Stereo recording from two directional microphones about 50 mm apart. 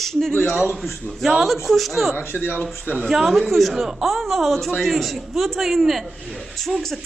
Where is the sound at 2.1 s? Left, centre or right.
Left.